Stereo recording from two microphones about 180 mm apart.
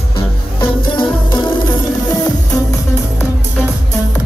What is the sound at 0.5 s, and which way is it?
Music, 25° left (ahead or behind).